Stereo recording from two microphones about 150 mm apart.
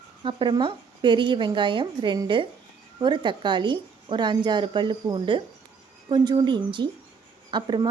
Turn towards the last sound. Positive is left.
turn(degrees=-30)  # may be behind; listen again after turning